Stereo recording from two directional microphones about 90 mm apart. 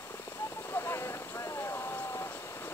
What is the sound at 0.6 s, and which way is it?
Vehicle, 25° left (ahead or behind).